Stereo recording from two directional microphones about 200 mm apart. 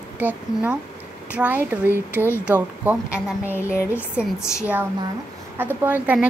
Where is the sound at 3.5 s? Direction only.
15° left (ahead or behind).